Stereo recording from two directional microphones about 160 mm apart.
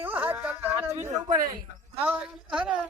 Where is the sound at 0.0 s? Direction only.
10° right (ahead or behind).